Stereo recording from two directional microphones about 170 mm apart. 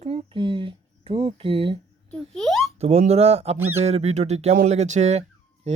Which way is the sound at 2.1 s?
5° left (ahead or behind).